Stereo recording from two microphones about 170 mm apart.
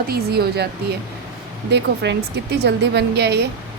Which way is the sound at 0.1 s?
70° right (ahead or behind).